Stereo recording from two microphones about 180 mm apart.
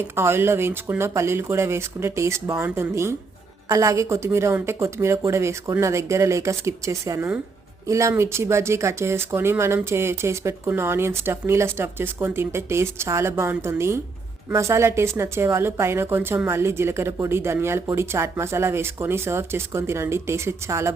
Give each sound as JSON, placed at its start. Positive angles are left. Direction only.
{"t": 0.2, "sound": "a woman's voice", "side_deg": -15}